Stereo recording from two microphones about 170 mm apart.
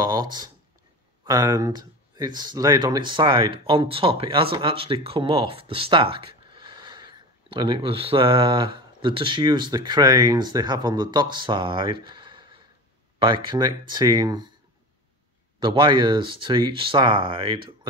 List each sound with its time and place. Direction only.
0.0 s a sound: 25° right (ahead or behind)
1.2 s speech: 20° right (ahead or behind)
15.6 s speech: 30° right (ahead or behind)